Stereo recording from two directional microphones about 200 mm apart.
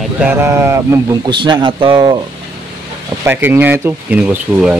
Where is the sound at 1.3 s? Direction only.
25° right (ahead or behind).